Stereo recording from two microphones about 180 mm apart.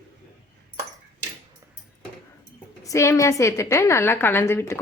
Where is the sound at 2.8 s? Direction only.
15° left (ahead or behind).